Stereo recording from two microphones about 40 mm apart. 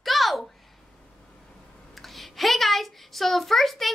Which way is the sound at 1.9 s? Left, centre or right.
Centre.